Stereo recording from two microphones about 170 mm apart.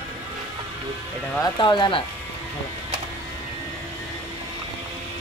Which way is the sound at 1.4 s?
25° left (ahead or behind).